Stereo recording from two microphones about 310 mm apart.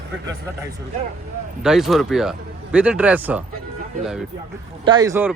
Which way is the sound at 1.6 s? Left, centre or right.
Centre.